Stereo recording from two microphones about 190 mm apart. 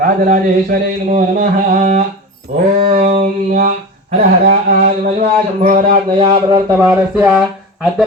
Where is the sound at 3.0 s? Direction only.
30° right (ahead or behind).